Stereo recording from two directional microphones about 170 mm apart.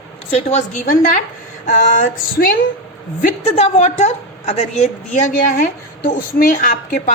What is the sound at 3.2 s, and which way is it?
A woman's voice, 40° left (ahead or behind).